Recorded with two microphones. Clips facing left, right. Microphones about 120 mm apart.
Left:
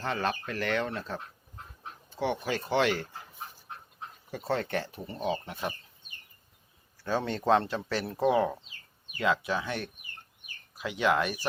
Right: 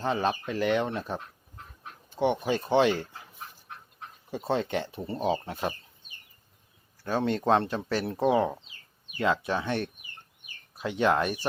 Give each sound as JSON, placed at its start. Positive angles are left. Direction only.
{"t": 0.0, "sound": "speech", "side_deg": -20}
{"t": 4.3, "sound": "speech", "side_deg": -20}
{"t": 7.0, "sound": "speech", "side_deg": -20}